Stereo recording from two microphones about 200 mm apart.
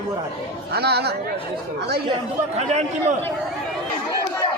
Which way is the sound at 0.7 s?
55° right (ahead or behind).